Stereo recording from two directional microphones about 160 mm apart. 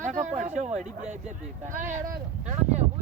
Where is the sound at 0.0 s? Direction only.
50° right (ahead or behind).